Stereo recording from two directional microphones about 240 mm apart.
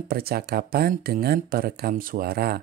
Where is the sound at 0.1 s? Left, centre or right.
Right.